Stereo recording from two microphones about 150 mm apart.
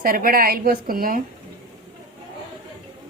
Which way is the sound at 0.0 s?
75° right (ahead or behind).